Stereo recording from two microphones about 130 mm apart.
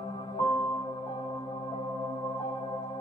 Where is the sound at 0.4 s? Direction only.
30° left (ahead or behind).